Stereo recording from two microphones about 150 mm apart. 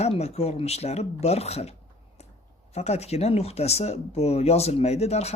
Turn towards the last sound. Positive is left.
turn(degrees=45)  # may be behind; listen again after turning